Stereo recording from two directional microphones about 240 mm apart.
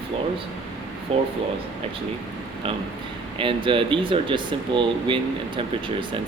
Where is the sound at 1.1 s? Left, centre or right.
Right.